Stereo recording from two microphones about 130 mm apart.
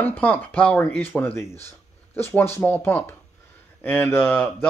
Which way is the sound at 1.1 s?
15° left (ahead or behind).